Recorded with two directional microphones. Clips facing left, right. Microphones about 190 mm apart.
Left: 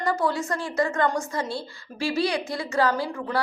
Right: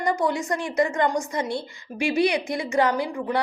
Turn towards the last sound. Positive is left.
turn(degrees=-15)  # may be behind; listen again after turning